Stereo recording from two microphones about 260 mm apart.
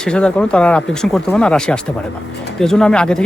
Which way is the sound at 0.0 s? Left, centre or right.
Centre.